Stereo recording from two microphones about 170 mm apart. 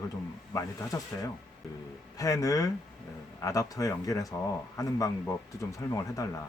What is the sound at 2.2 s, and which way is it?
Speech, 20° left (ahead or behind).